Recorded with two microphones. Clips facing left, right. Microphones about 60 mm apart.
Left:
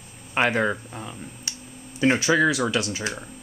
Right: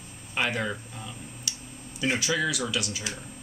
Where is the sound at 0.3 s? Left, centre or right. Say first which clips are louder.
Left 7 dB; left.